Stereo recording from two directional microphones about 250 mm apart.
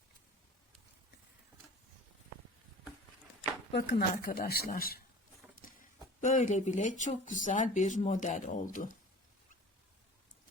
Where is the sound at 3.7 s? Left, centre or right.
Left.